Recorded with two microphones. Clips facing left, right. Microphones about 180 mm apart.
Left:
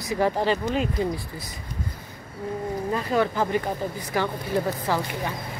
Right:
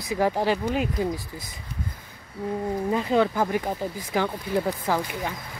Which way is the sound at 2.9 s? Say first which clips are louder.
Right 2 dB; 15° right (ahead or behind).